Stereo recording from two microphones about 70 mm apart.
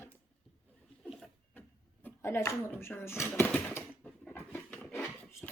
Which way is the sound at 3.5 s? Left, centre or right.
Left.